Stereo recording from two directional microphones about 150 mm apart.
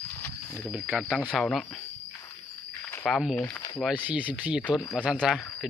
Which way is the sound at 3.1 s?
5° right (ahead or behind).